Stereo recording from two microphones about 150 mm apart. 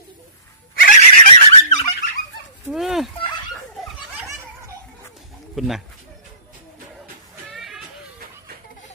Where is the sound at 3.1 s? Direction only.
30° left (ahead or behind).